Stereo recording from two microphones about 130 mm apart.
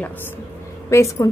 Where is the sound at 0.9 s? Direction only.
25° left (ahead or behind).